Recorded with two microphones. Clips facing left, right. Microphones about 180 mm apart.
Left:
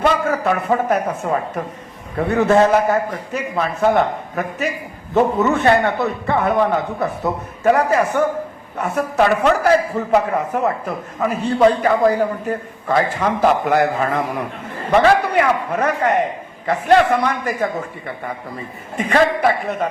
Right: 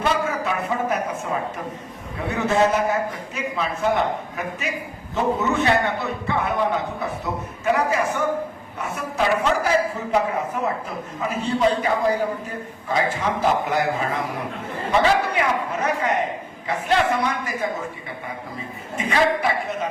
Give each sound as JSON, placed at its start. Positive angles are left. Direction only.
{"t": 0.0, "sound": "a woman's voice", "side_deg": 55}
{"t": 18.9, "sound": "a man's voice", "side_deg": 55}